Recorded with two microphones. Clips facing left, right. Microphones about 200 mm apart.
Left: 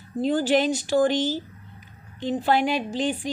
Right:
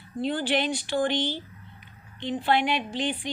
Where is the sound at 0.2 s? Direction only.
45° left (ahead or behind).